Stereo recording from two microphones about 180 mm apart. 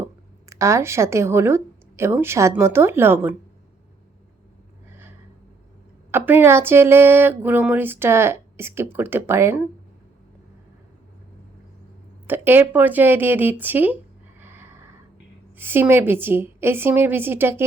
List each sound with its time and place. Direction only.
0.5 s speech: 15° right (ahead or behind)
6.1 s speech: 10° right (ahead or behind)
12.3 s speech: 10° right (ahead or behind)
14.3 s neigh: 10° right (ahead or behind)
15.5 s speech: 10° right (ahead or behind)